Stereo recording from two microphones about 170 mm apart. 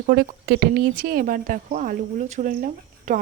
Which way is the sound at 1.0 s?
60° right (ahead or behind).